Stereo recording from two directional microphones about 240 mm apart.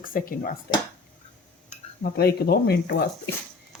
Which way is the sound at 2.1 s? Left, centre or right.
Left.